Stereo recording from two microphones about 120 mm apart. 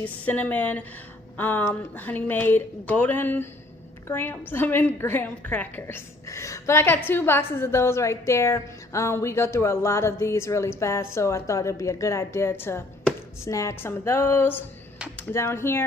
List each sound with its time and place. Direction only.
0.0 s a woman's voice: 15° left (ahead or behind)